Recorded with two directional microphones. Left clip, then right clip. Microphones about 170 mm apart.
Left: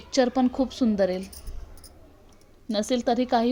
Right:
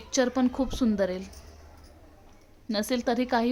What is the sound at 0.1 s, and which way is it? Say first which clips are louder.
A woman's voice: left 3 dB; 15° left (ahead or behind).